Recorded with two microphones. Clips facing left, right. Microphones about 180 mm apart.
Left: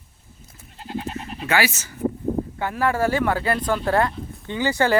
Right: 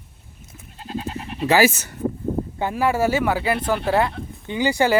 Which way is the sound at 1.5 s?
40° right (ahead or behind).